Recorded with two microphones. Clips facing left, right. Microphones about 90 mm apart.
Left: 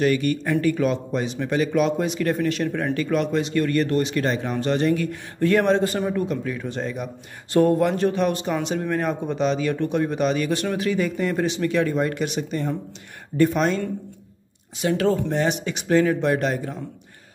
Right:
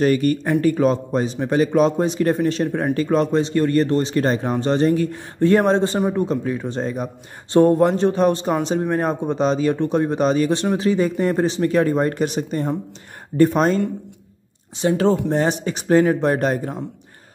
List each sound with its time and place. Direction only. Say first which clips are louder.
0.0 s a man's voice: right 3 dB; 40° right (ahead or behind)